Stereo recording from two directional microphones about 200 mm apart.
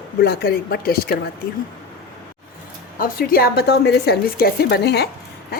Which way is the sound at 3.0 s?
45° left (ahead or behind).